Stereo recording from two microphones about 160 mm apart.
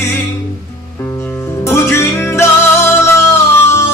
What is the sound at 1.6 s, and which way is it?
Music, 15° left (ahead or behind).